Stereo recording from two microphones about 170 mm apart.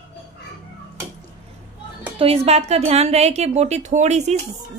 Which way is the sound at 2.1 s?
35° right (ahead or behind).